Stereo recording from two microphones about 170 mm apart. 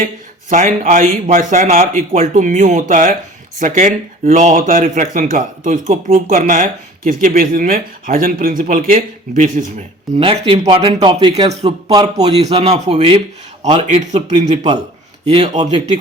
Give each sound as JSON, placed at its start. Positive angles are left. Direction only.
{"t": 0.5, "sound": "a man's voice", "side_deg": -45}
{"t": 10.2, "sound": "a man's voice", "side_deg": -30}